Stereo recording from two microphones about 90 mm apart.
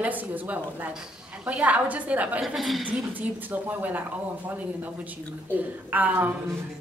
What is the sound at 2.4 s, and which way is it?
Speech, centre (ahead or behind).